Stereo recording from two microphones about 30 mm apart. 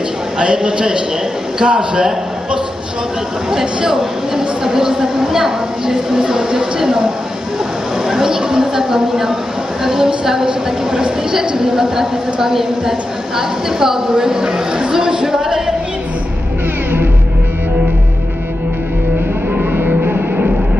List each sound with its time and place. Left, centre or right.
0.4 s a woman's voice: right
3.4 s speech: centre
8.1 s a sound: right
9.8 s a woman's voice: centre
20.0 s music: right